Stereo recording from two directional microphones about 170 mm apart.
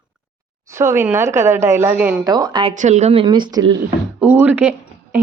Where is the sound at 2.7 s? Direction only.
45° right (ahead or behind); by 3.8 s 25° right (ahead or behind).